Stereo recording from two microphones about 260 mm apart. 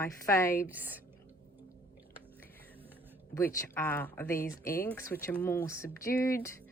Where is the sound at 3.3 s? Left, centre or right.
Centre.